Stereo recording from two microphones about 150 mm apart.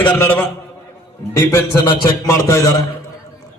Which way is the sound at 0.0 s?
15° left (ahead or behind).